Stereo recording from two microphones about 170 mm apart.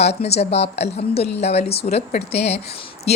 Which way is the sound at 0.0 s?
40° left (ahead or behind).